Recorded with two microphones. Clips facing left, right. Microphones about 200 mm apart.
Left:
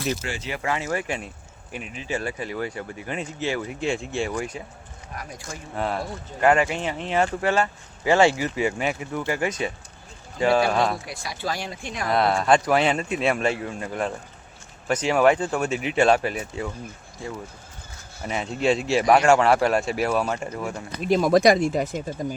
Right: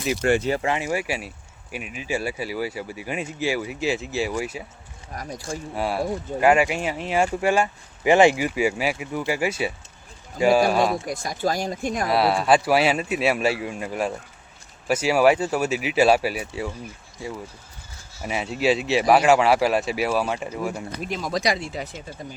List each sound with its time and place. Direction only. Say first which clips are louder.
0.2 s speech: right 12 dB; 55° right (ahead or behind)
0.5 s speech: right 3 dB; 25° right (ahead or behind)
0.8 s speech: right 1 dB; 10° right (ahead or behind)
5.1 s speech: right 5 dB; 35° right (ahead or behind)
5.7 s speech: right 2 dB; 10° right (ahead or behind)
11.0 s speech: right 6 dB; 45° right (ahead or behind)
12.1 s speech: even; 5° right (ahead or behind)
18.2 s speech: right 1 dB; 10° right (ahead or behind)
21.2 s speech: left 8 dB; 55° left (ahead or behind)